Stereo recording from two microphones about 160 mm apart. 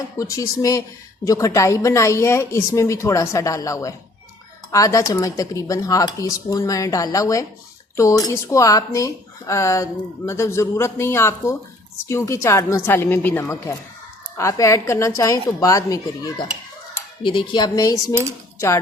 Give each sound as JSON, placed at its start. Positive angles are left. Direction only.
{"t": 0.2, "sound": "a woman's voice", "side_deg": 20}